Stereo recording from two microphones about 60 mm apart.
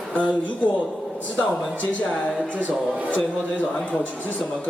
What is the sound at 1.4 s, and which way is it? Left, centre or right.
Speech, left.